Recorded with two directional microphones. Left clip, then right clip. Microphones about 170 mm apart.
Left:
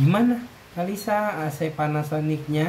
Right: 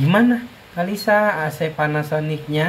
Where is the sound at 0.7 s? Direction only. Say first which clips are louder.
Right 7 dB; 10° left (ahead or behind).